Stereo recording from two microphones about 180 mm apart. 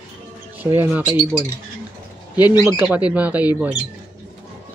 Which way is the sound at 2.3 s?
20° left (ahead or behind).